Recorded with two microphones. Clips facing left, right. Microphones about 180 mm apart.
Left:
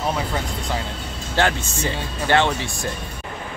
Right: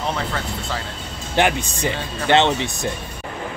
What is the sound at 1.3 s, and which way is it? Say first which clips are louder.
Speech: right 2 dB; 15° right (ahead or behind).